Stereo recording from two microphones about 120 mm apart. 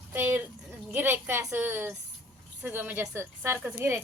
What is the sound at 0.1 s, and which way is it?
A woman's voice, 20° right (ahead or behind).